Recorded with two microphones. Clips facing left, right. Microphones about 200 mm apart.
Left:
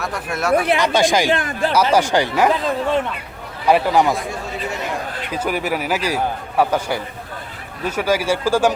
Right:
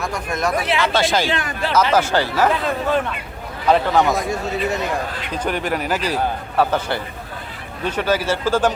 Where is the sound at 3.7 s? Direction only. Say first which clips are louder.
Left 1 dB; 10° left (ahead or behind).